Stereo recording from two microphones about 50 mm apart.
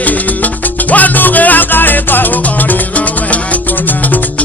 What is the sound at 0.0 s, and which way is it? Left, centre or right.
Music, left.